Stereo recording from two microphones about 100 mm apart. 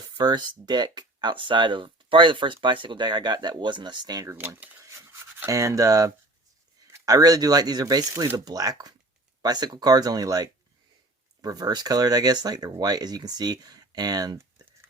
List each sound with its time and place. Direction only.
0.2 s speech: 45° right (ahead or behind)
4.3 s speech: 20° right (ahead or behind)
4.8 s a sound: 30° right (ahead or behind)
5.5 s speech: 35° right (ahead or behind)